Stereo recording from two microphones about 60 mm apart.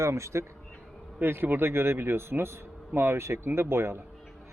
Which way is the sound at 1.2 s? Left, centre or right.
Right.